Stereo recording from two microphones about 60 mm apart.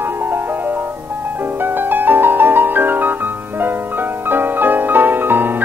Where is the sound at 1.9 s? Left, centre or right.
Right.